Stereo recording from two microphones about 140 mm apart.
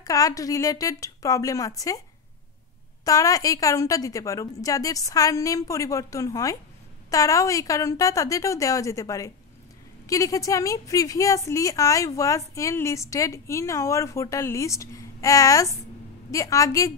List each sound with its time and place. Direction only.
0.0 s a woman's voice: 25° left (ahead or behind)
3.1 s a woman's voice: 25° left (ahead or behind)